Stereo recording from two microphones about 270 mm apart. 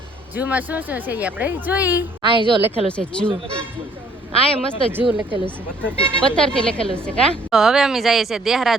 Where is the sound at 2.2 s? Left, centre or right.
Centre.